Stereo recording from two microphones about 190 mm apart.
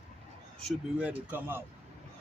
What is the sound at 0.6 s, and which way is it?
A man's voice, 5° right (ahead or behind).